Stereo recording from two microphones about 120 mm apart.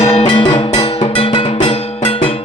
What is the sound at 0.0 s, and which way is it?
Music, 60° left (ahead or behind).